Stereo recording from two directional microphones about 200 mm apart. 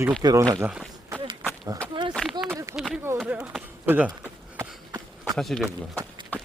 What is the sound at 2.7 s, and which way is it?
A man's voice, 5° right (ahead or behind).